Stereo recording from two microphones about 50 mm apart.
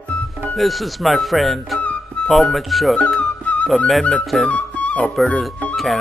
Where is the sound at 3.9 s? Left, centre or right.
Centre.